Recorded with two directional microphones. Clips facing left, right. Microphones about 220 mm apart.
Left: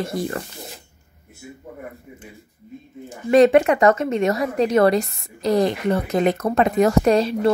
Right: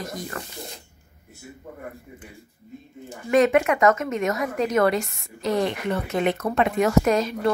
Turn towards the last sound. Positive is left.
turn(degrees=30)  # may be behind; listen again after turning